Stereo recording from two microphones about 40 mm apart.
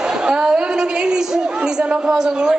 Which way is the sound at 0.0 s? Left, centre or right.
Right.